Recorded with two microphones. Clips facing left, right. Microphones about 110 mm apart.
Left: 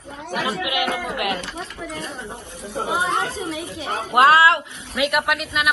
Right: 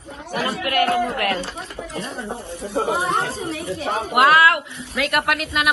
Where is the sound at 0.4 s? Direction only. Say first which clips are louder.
Right 4 dB; 5° left (ahead or behind).